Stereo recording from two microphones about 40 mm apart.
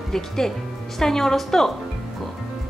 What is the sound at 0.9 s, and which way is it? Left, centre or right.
Speech, centre.